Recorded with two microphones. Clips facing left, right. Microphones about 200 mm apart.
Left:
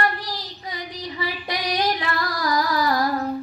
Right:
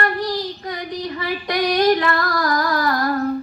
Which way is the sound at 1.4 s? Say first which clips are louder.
Right 9 dB; 50° right (ahead or behind).